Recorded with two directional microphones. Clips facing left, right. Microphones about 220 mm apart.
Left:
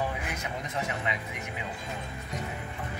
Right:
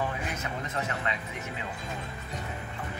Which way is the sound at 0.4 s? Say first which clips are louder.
Even; 15° left (ahead or behind).